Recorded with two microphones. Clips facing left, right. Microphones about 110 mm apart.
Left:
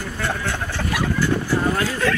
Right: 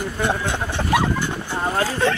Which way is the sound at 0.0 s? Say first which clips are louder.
Right 3 dB; 20° right (ahead or behind).